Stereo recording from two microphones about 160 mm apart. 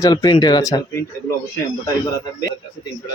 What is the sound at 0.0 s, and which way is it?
Speech, 25° left (ahead or behind).